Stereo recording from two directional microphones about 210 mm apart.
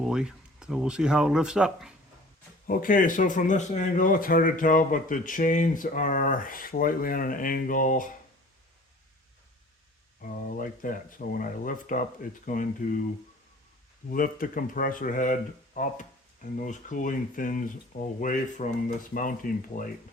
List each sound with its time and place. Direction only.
0.0 s speech: 5° right (ahead or behind)
2.6 s speech: 40° left (ahead or behind)
10.2 s speech: 40° left (ahead or behind)
14.1 s speech: 40° left (ahead or behind)